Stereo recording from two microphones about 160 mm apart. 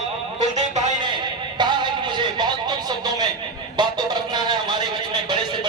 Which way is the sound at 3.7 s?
25° right (ahead or behind).